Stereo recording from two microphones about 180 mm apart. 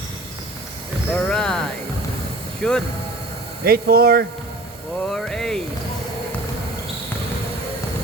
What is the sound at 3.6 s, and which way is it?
Speech, 55° right (ahead or behind).